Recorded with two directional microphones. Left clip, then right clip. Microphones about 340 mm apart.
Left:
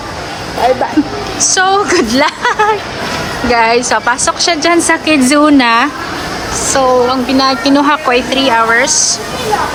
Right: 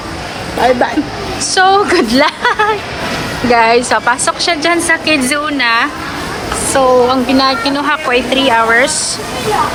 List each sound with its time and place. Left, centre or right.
1.4 s a woman's voice: centre